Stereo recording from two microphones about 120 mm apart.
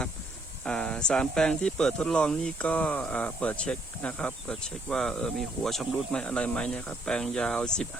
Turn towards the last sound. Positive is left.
turn(degrees=5)  # may be behind; listen again after turning